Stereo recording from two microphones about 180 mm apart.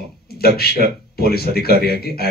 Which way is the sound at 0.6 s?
60° left (ahead or behind).